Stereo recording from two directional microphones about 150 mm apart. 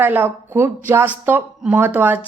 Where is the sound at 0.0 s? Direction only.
15° right (ahead or behind).